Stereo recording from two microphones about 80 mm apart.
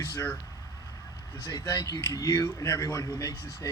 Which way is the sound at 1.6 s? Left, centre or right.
Left.